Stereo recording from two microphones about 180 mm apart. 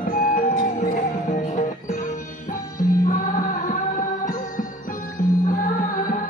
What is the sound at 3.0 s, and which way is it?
Music, 50° left (ahead or behind).